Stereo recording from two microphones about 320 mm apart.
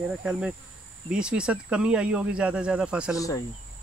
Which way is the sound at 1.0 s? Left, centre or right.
Centre.